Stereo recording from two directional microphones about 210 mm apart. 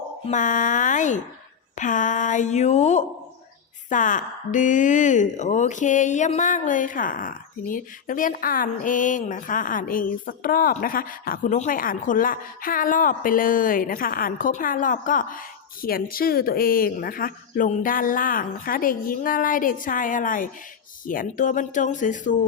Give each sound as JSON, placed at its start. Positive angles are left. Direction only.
{"t": 0.3, "sound": "speech", "side_deg": 35}